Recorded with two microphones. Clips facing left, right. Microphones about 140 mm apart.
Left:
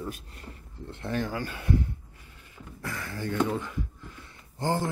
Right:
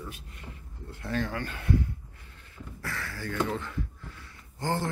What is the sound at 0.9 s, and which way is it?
Speech, 20° left (ahead or behind).